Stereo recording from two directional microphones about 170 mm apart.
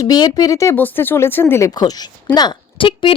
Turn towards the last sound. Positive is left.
turn(degrees=30)  # may be behind; listen again after turning